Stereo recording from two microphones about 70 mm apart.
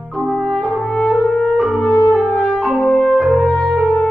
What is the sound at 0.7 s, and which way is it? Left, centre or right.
French horn, left.